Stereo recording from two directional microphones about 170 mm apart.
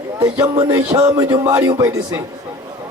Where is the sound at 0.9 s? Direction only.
20° right (ahead or behind).